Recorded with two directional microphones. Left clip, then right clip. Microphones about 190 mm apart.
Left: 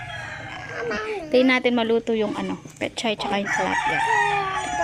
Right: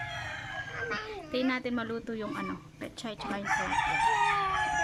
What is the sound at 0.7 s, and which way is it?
Speech, 35° left (ahead or behind).